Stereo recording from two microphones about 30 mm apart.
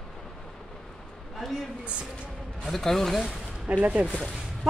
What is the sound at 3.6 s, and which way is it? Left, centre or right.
Speech, right.